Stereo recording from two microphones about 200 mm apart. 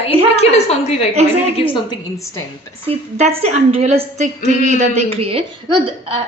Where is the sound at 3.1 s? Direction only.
30° right (ahead or behind).